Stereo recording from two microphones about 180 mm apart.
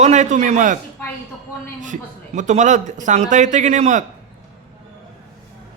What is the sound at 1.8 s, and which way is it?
A man's voice, 45° right (ahead or behind).